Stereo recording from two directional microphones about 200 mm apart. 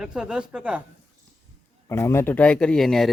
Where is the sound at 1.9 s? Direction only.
15° left (ahead or behind).